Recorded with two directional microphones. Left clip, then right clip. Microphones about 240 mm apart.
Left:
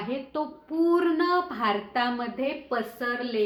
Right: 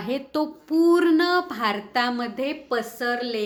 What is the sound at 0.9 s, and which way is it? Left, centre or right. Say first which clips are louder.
A woman's voice: right 4 dB; right.